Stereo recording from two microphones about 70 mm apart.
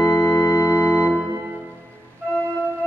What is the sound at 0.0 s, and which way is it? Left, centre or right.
Organ, left.